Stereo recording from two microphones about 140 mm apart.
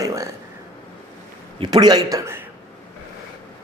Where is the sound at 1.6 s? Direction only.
30° right (ahead or behind).